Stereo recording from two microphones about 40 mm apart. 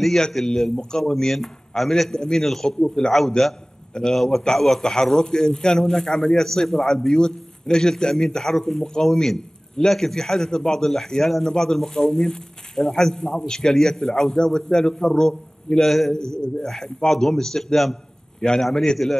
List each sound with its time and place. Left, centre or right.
0.3 s a man's voice: centre
5.0 s a man's voice: centre
16.1 s a man's voice: centre